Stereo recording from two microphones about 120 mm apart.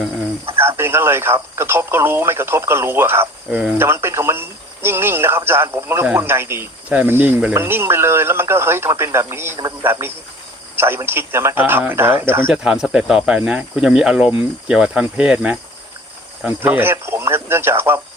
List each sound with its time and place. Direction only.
0.5 s speech: 20° right (ahead or behind)
3.5 s speech: 5° right (ahead or behind)
3.8 s speech: 20° right (ahead or behind)
12.6 s speech: 5° right (ahead or behind)
16.6 s speech: 15° right (ahead or behind)